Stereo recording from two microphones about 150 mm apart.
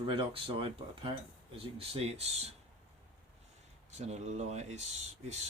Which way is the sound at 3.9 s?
50° right (ahead or behind).